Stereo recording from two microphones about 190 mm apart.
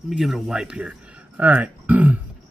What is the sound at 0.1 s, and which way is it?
Speech, 5° right (ahead or behind).